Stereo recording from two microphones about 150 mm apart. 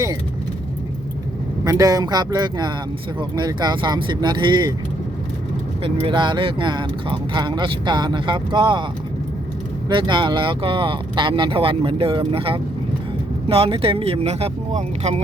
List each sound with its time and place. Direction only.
1.6 s speech: 25° right (ahead or behind)
5.8 s speech: 35° right (ahead or behind)
9.9 s speech: 35° right (ahead or behind); by 15.2 s 50° right (ahead or behind)